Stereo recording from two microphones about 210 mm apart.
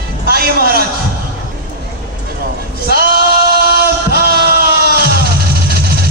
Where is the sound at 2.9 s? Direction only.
45° right (ahead or behind).